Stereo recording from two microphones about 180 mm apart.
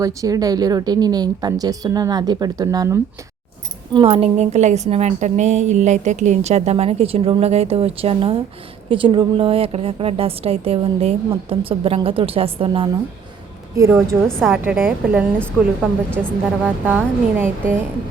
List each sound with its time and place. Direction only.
0.0 s speech: 20° right (ahead or behind)
3.9 s a woman's voice: 30° right (ahead or behind)
14.3 s a woman's voice: 5° left (ahead or behind)
14.5 s speech: 10° right (ahead or behind)
15.4 s a woman's voice: 5° left (ahead or behind)
16.6 s speech: 10° right (ahead or behind)